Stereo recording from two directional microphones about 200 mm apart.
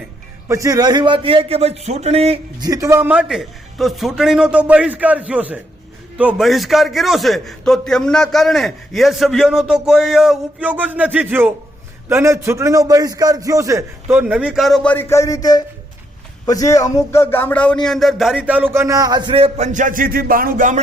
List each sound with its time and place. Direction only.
0.4 s a man's voice: 15° right (ahead or behind)
2.6 s a man's voice: 15° right (ahead or behind); by 20.8 s 40° right (ahead or behind)